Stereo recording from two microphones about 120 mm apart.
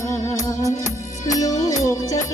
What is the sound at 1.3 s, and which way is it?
Music, 30° left (ahead or behind).